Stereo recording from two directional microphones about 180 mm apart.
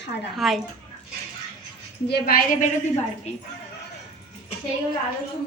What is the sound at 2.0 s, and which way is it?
Speech, 60° left (ahead or behind).